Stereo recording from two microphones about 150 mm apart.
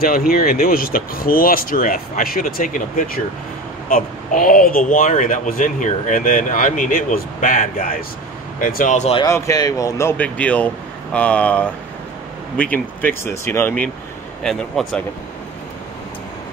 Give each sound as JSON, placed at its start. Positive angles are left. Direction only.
{"t": 0.0, "sound": "speech", "side_deg": 75}
{"t": 9.2, "sound": "speech", "side_deg": 25}
{"t": 12.7, "sound": "speech", "side_deg": 15}
{"t": 14.4, "sound": "speech", "side_deg": 0}